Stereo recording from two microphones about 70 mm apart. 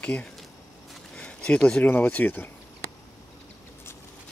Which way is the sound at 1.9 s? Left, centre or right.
Left.